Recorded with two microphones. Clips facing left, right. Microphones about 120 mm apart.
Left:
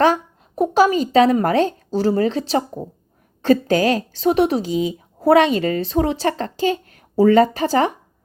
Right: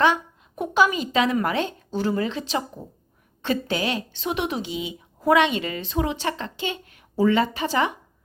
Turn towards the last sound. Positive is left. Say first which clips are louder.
# left 6 dB
turn(degrees=40)  # may be behind; listen again after turning